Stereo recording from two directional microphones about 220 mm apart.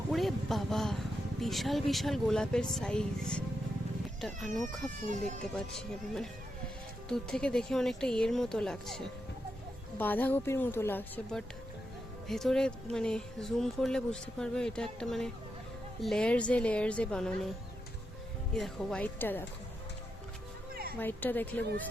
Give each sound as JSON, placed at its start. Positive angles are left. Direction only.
{"t": 0.1, "sound": "speech", "side_deg": 0}
{"t": 5.0, "sound": "speech", "side_deg": -35}
{"t": 7.1, "sound": "speech", "side_deg": 5}
{"t": 10.0, "sound": "a woman's voice", "side_deg": 10}
{"t": 18.5, "sound": "a woman's voice", "side_deg": 0}
{"t": 21.0, "sound": "a woman's voice", "side_deg": 10}